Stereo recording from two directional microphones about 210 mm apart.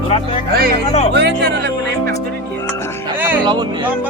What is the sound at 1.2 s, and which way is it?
Speech, 55° right (ahead or behind).